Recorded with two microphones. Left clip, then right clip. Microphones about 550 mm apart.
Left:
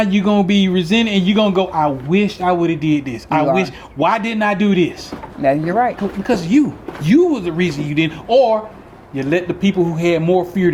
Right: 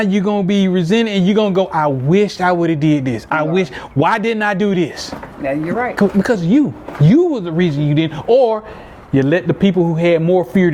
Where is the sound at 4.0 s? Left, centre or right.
Right.